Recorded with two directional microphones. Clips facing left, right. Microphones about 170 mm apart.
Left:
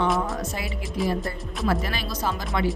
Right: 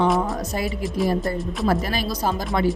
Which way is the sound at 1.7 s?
40° right (ahead or behind).